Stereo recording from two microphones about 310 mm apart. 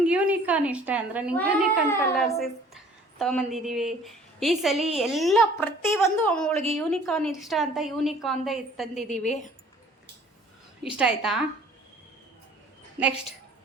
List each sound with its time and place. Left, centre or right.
0.0 s a woman's voice: centre
9.0 s a woman's voice: left
10.8 s a woman's voice: centre